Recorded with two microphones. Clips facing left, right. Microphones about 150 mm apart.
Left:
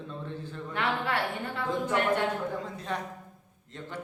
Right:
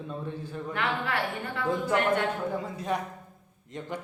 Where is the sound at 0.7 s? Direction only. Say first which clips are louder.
Even; 30° left (ahead or behind).